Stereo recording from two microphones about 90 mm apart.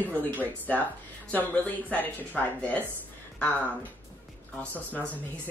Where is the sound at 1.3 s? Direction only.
20° left (ahead or behind).